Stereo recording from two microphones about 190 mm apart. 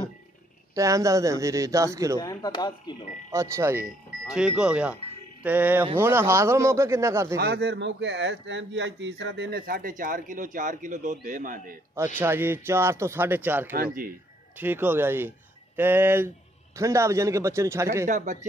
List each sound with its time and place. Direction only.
0.7 s speech: 15° right (ahead or behind)
2.1 s speech: 20° left (ahead or behind)
3.3 s speech: 15° right (ahead or behind)
4.3 s speech: 5° right (ahead or behind)
7.3 s speech: 60° right (ahead or behind)
12.2 s speech: 10° right (ahead or behind)
18.0 s speech: 40° right (ahead or behind)